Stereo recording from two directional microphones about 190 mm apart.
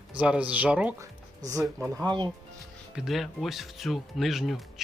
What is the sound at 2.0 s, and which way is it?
Speech, 20° right (ahead or behind).